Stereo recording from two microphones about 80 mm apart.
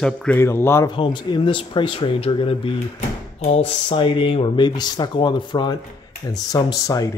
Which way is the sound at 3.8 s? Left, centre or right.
Left.